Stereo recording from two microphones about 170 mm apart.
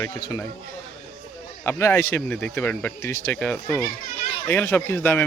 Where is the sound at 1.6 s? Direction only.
15° left (ahead or behind).